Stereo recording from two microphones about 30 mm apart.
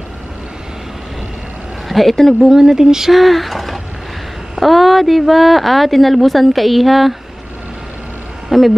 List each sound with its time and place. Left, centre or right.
1.9 s speech: centre
2.5 s speech: centre
3.1 s speech: centre
8.5 s speech: centre